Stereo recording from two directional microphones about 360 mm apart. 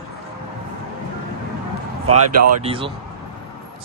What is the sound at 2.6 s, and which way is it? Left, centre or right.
Speech, centre.